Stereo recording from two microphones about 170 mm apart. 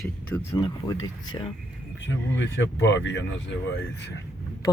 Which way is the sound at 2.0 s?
90° left.